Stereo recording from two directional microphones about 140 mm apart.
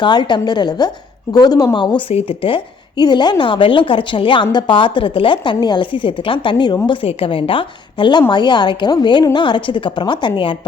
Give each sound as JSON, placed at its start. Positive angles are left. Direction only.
{"t": 0.0, "sound": "a woman's voice", "side_deg": 30}